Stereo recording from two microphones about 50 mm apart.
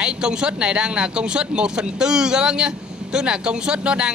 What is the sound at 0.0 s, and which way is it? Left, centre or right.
Speech, centre.